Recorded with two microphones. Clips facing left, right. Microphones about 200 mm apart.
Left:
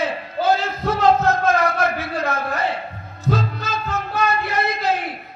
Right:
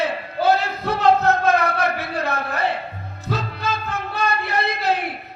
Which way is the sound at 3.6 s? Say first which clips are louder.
Even; 60° right (ahead or behind).